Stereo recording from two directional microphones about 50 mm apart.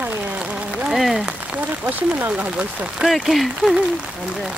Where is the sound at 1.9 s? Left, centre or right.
Right.